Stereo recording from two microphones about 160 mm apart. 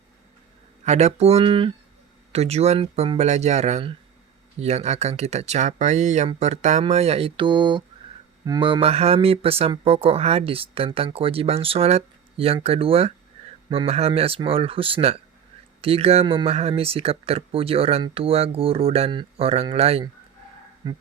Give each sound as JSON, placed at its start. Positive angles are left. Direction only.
{"t": 0.9, "sound": "speech", "side_deg": -45}